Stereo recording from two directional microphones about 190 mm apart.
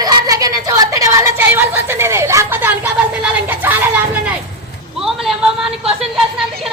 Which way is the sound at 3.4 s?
10° right (ahead or behind).